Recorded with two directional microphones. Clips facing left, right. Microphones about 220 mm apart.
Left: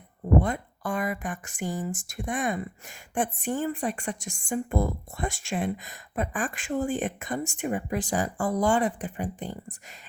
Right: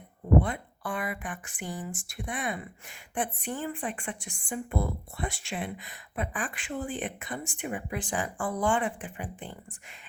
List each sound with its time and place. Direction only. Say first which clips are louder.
0.3 s a woman's voice: left 1 dB; 40° left (ahead or behind)